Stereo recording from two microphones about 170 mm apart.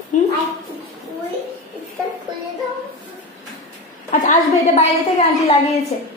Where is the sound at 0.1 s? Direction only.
45° left (ahead or behind).